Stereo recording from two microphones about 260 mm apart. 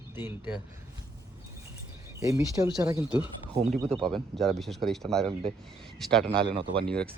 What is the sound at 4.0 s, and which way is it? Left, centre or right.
Speech, centre.